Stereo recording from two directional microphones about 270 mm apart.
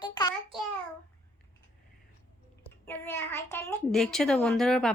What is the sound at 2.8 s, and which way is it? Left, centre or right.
Speech, centre.